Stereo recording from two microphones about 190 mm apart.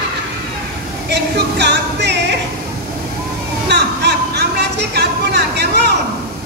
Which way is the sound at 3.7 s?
60° right (ahead or behind).